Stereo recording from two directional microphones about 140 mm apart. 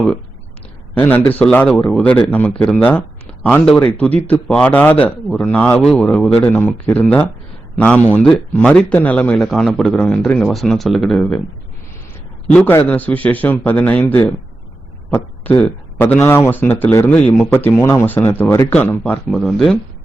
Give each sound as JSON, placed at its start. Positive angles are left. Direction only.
{"t": 0.9, "sound": "speech", "side_deg": 15}
{"t": 12.5, "sound": "speech", "side_deg": 15}
{"t": 19.0, "sound": "speech", "side_deg": 5}